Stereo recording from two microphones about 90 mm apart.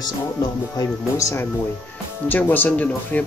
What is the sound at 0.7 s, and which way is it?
Speech, 35° left (ahead or behind).